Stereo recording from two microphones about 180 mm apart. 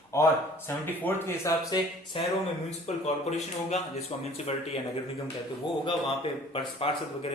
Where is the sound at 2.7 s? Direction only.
40° left (ahead or behind).